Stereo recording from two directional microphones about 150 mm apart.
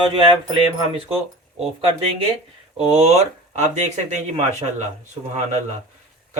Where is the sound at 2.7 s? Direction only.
40° right (ahead or behind).